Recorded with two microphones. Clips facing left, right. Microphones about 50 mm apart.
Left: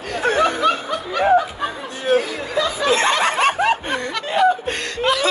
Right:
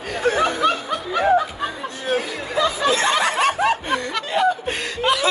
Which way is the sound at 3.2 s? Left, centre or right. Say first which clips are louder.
Left 2 dB; left.